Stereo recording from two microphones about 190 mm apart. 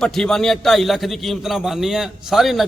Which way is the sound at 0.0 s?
5° left (ahead or behind).